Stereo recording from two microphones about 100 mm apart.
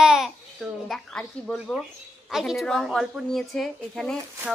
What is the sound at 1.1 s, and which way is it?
A woman's voice, 5° left (ahead or behind).